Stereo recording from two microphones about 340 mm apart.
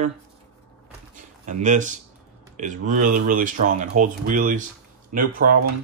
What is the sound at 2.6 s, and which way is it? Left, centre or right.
Speech, right.